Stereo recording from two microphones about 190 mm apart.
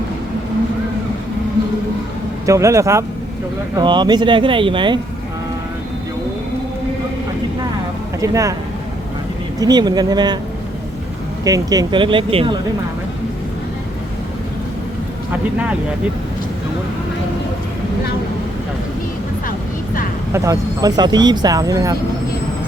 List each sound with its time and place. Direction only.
2.5 s speech: 15° right (ahead or behind)
8.2 s speech: 15° right (ahead or behind)
9.6 s speech: 20° right (ahead or behind)
11.4 s speech: 20° right (ahead or behind)
19.5 s vehicle: 45° left (ahead or behind)
20.3 s speech: 15° right (ahead or behind)